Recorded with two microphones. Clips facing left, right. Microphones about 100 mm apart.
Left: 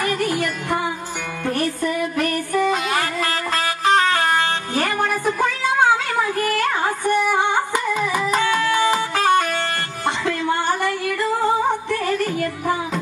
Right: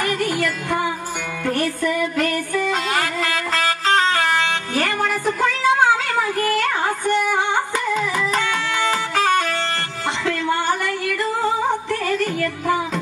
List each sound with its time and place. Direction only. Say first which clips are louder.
0.0 s music: even; 20° left (ahead or behind)
10.2 s singing: right 2 dB; 20° left (ahead or behind)
11.9 s music: even; 20° left (ahead or behind)